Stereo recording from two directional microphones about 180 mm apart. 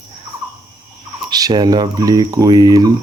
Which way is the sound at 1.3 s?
20° right (ahead or behind).